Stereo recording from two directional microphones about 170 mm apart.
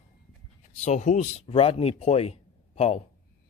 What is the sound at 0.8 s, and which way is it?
Speech, 45° left (ahead or behind).